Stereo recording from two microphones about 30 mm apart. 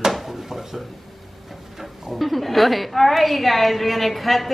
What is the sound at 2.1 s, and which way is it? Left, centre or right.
A woman's voice, centre.